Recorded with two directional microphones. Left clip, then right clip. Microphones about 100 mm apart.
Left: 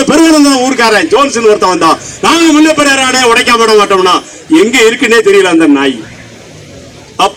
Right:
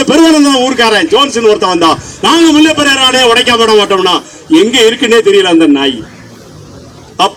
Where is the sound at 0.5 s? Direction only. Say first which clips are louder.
Even; 35° left (ahead or behind).